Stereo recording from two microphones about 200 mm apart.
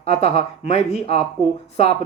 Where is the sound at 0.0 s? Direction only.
30° left (ahead or behind).